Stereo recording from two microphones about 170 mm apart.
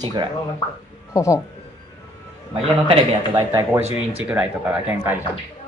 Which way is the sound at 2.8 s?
35° right (ahead or behind).